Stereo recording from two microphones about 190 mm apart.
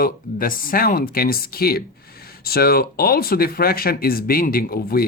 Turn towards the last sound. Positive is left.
turn(degrees=50)  # may be behind; listen again after turning